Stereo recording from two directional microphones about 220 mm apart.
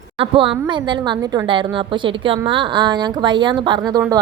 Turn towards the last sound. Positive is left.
turn(degrees=-20)  # may be behind; listen again after turning